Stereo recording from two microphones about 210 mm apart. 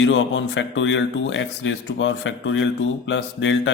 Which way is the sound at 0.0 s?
65° left (ahead or behind).